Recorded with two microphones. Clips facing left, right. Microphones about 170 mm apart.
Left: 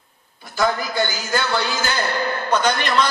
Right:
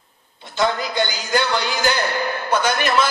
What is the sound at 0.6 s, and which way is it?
Speech, 20° right (ahead or behind).